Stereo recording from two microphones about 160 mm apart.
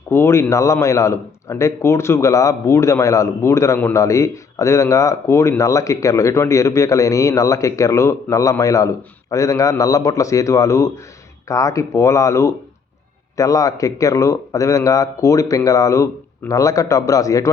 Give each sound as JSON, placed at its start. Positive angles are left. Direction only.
{"t": 0.1, "sound": "speech", "side_deg": 15}